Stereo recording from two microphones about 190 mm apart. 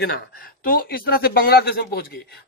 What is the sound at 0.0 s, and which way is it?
A man's voice, 55° left (ahead or behind).